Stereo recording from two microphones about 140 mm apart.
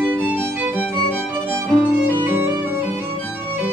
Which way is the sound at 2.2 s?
15° right (ahead or behind).